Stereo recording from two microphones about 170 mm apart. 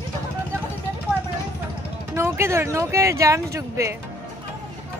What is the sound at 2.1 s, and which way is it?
Speech, 15° right (ahead or behind).